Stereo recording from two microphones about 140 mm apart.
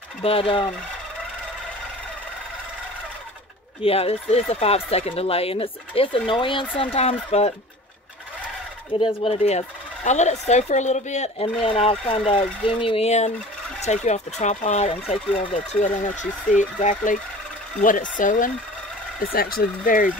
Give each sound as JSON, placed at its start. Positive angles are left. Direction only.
{"t": 0.2, "sound": "speech", "side_deg": 40}
{"t": 3.8, "sound": "speech", "side_deg": 45}
{"t": 8.9, "sound": "speech", "side_deg": 45}
{"t": 11.6, "sound": "speech", "side_deg": 45}
{"t": 15.5, "sound": "speech", "side_deg": 65}
{"t": 19.3, "sound": "speech", "side_deg": 90}